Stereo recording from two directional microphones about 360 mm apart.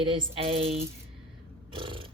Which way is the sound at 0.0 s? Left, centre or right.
Centre.